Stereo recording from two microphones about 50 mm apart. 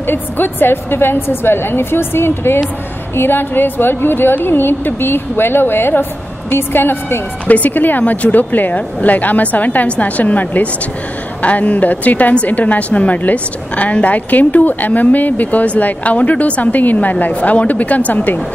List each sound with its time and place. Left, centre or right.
0.0 s a woman's voice: left
7.4 s a woman's voice: left